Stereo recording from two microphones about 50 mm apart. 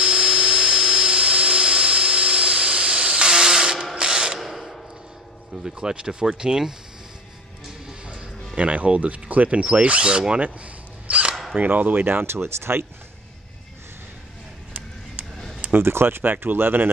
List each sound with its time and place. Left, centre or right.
0.0 s a sound: centre
3.9 s mechanisms: centre
4.4 s mechanisms: centre
5.6 s speech: centre
7.8 s music: centre
8.5 s speech: right
10.4 s a sound: right
11.5 s speech: right
15.7 s speech: right